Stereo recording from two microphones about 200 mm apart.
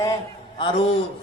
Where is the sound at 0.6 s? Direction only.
25° left (ahead or behind).